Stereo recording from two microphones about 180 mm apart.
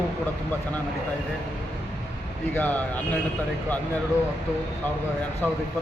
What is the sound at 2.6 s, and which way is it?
Speech, 10° left (ahead or behind).